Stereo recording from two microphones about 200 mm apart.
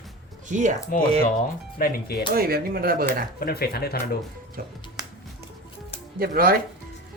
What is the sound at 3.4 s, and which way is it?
Speech, 50° left (ahead or behind).